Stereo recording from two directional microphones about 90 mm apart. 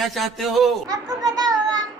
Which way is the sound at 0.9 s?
45° right (ahead or behind).